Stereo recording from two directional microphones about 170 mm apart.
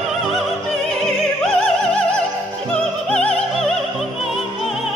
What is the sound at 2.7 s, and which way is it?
Music, 5° left (ahead or behind).